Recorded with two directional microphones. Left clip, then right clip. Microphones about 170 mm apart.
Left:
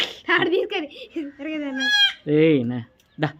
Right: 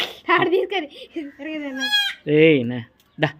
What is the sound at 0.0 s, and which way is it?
A child's voice, centre (ahead or behind).